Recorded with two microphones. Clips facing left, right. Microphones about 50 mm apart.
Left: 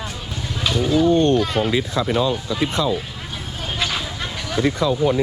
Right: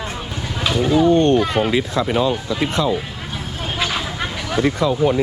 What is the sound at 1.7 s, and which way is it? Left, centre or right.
Speech, right.